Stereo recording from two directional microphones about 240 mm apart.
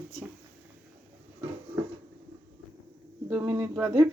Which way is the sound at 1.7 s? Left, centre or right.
Centre.